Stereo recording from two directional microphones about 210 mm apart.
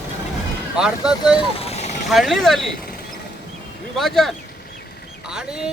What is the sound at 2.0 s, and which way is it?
Speech, centre (ahead or behind).